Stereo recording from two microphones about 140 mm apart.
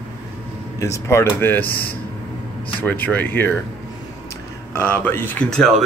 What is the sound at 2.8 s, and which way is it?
Speech, 15° left (ahead or behind).